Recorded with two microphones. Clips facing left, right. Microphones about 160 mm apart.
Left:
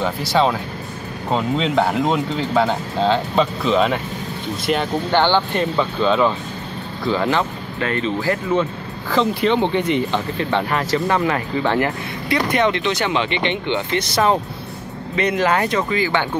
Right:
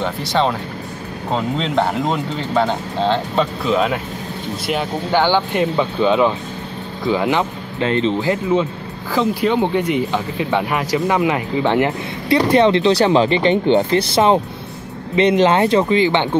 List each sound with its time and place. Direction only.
0.0 s speech: 5° left (ahead or behind); by 8.6 s 20° right (ahead or behind)
9.1 s speech: 5° right (ahead or behind); by 16.3 s 25° right (ahead or behind)